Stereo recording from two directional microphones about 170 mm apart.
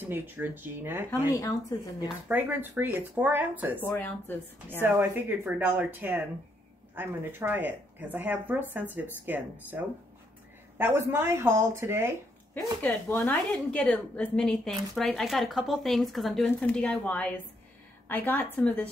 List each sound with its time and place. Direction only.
0.0 s speech: 10° right (ahead or behind)
1.3 s a woman's voice: 20° left (ahead or behind)
2.2 s speech: 10° right (ahead or behind)
3.8 s a woman's voice: 10° left (ahead or behind)
4.8 s speech: 15° right (ahead or behind)
12.8 s a woman's voice: 10° left (ahead or behind)